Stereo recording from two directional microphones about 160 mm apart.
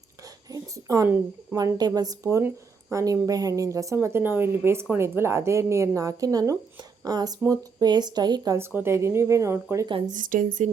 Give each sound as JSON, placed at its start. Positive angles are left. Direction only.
{"t": 0.5, "sound": "a sound", "side_deg": -20}
{"t": 1.5, "sound": "speech", "side_deg": -25}
{"t": 10.1, "sound": "a woman's voice", "side_deg": -55}